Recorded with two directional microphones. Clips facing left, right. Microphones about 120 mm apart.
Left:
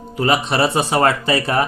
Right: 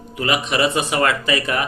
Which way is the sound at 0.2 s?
35° left (ahead or behind).